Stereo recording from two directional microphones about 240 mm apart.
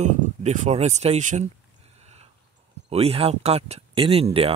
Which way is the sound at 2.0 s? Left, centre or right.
Right.